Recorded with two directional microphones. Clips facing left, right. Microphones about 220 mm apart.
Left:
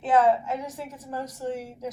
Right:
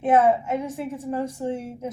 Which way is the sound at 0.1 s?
25° right (ahead or behind).